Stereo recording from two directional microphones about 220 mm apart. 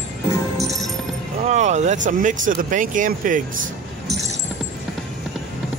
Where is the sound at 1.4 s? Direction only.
30° right (ahead or behind).